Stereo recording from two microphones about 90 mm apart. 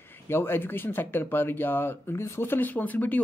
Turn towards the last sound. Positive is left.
turn(degrees=20)  # may be behind; listen again after turning